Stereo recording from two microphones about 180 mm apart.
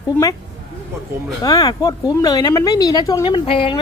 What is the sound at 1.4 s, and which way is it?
Speech, 20° left (ahead or behind).